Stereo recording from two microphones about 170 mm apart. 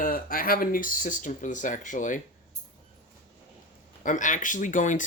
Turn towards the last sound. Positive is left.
turn(degrees=50)  # may be behind; listen again after turning